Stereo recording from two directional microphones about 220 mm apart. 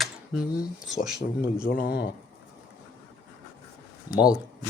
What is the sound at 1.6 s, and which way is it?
Speech, 40° left (ahead or behind).